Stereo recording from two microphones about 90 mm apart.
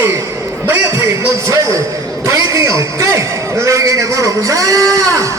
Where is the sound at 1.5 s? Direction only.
40° right (ahead or behind).